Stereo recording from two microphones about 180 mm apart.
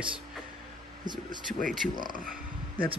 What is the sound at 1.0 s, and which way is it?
Speech, 25° right (ahead or behind).